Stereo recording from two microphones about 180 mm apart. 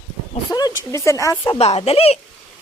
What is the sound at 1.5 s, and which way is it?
Speech, 35° left (ahead or behind).